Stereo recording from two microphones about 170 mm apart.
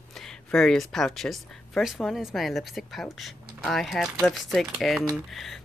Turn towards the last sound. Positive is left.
turn(degrees=0)  # may be behind; listen again after turning